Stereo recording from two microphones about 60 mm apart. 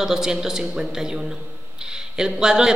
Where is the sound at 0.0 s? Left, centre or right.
Centre.